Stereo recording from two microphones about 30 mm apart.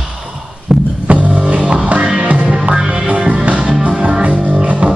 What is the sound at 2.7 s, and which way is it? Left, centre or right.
Music, right.